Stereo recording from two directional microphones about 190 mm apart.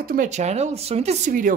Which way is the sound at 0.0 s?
50° right (ahead or behind).